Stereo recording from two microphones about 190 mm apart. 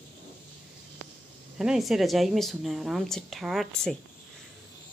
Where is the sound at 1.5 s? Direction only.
5° right (ahead or behind).